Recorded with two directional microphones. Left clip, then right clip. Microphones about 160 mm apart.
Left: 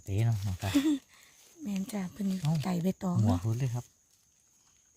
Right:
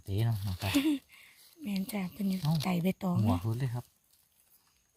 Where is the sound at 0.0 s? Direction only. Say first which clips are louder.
Left 1 dB; 10° right (ahead or behind).